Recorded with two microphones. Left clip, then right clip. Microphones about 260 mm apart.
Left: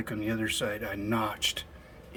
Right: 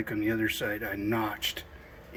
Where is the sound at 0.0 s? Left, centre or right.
Centre.